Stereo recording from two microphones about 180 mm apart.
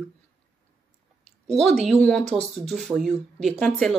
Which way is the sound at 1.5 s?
Centre (ahead or behind).